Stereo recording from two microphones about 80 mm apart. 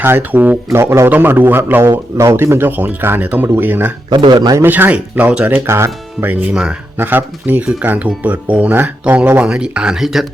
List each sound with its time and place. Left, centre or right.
0.0 s a man's voice: right
1.9 s a man's voice: right
4.1 s speech: right
4.5 s a man's voice: right
5.6 s speech: right
6.2 s speech: centre
6.9 s a man's voice: right; by 10.2 s centre